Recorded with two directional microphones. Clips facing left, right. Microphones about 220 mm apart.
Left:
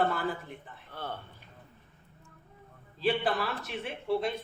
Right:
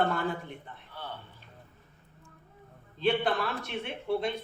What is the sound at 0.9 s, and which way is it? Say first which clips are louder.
Speech: left 3 dB; 50° left (ahead or behind).